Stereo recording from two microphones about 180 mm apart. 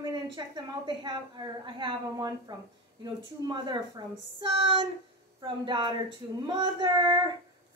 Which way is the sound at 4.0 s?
25° right (ahead or behind).